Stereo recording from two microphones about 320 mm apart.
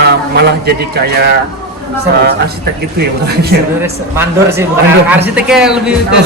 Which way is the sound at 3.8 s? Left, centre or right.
Centre.